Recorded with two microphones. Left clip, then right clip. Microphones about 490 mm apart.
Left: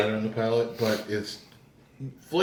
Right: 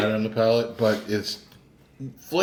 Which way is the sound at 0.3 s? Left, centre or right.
Right.